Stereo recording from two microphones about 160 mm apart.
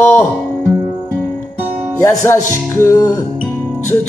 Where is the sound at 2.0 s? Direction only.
15° left (ahead or behind).